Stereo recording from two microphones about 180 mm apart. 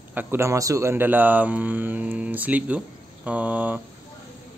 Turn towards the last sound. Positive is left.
turn(degrees=-10)  # may be behind; listen again after turning